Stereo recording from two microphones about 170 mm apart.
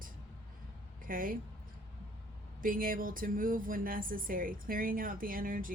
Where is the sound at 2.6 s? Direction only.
55° right (ahead or behind).